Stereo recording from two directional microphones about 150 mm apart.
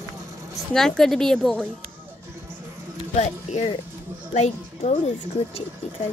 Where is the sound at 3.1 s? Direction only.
50° left (ahead or behind).